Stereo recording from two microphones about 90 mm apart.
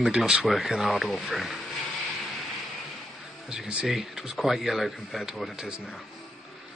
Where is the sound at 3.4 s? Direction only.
10° right (ahead or behind).